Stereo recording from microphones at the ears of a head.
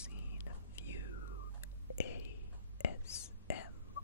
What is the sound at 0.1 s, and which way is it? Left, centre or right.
Whispering, left.